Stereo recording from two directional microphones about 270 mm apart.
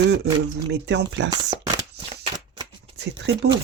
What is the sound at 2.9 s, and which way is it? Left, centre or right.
Speech, right.